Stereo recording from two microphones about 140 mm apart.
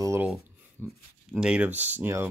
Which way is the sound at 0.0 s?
20° right (ahead or behind).